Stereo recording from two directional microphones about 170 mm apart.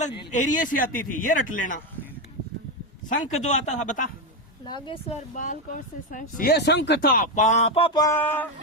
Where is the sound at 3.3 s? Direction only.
45° left (ahead or behind).